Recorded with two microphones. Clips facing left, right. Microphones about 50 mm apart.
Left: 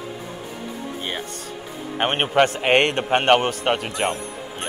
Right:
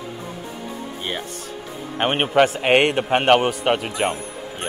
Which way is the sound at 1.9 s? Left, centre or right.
Centre.